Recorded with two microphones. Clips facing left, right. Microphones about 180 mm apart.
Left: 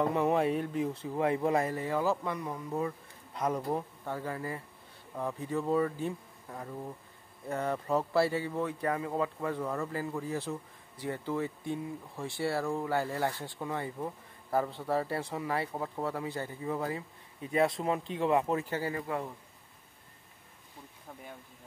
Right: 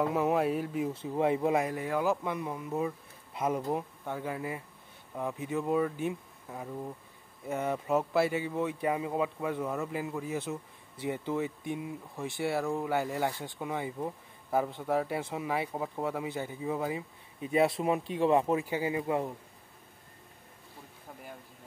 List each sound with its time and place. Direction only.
0.0 s speech: 5° right (ahead or behind)
1.1 s speech: 15° right (ahead or behind)
1.5 s speech: 5° right (ahead or behind)
8.1 s speech: 15° right (ahead or behind)